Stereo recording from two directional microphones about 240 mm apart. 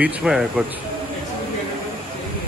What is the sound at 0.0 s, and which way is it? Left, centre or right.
Speech, centre.